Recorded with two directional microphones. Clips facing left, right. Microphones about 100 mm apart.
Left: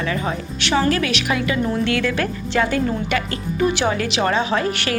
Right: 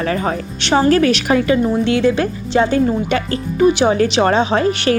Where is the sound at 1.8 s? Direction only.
25° right (ahead or behind).